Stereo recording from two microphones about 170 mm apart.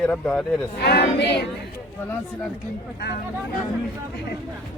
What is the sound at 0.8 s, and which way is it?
Speech, 75° left (ahead or behind).